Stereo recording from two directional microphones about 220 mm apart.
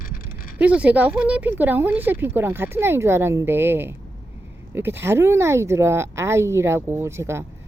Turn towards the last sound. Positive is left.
turn(degrees=-10)  # may be behind; listen again after turning